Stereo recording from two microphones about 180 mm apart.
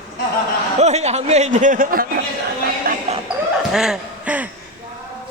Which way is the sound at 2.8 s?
50° right (ahead or behind).